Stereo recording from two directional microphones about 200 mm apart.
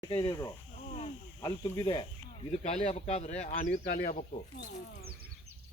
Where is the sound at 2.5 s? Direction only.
30° left (ahead or behind).